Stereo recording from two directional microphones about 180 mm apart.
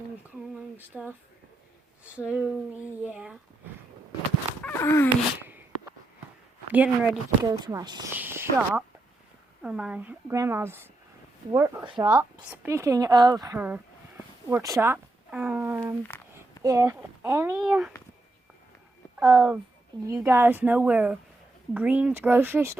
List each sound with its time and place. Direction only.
0.8 s speech: 10° right (ahead or behind)
2.1 s speech: 5° right (ahead or behind)
4.6 s a sound: 15° left (ahead or behind)
5.4 s a sound: 10° right (ahead or behind)
6.7 s speech: 10° right (ahead or behind)
7.4 s speech: 20° right (ahead or behind)
8.1 s speech: 10° right (ahead or behind)
16.0 s a sound: 10° left (ahead or behind)
16.6 s speech: 15° right (ahead or behind)
17.6 s speech: 5° right (ahead or behind)
19.2 s speech: centre (ahead or behind)
20.1 s speech: 15° right (ahead or behind)